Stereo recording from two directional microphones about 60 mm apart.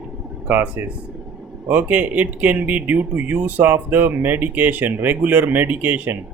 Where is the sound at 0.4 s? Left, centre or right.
Right.